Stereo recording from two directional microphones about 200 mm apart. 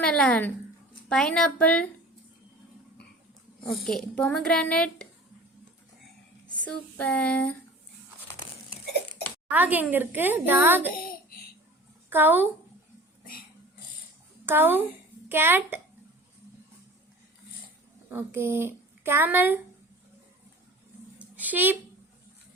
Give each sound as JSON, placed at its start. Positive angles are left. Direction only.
{"t": 0.0, "sound": "a child's voice", "side_deg": 5}
{"t": 3.6, "sound": "a woman's voice", "side_deg": 50}
{"t": 3.8, "sound": "a child's voice", "side_deg": 5}
{"t": 6.6, "sound": "a sound", "side_deg": 5}
{"t": 9.5, "sound": "a woman's voice", "side_deg": -10}
{"t": 10.9, "sound": "a sound", "side_deg": 45}
{"t": 12.1, "sound": "a woman's voice", "side_deg": -10}
{"t": 14.4, "sound": "a woman's voice", "side_deg": -10}
{"t": 18.1, "sound": "a woman's voice", "side_deg": -10}
{"t": 21.2, "sound": "a sound", "side_deg": -10}